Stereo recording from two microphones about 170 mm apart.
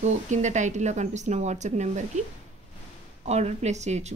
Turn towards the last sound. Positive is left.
turn(degrees=-40)  # may be behind; listen again after turning